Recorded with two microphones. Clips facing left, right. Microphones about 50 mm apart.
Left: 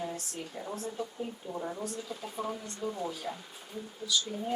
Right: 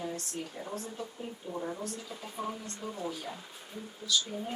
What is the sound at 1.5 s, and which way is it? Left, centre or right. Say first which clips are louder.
Speech: left 1 dB; centre.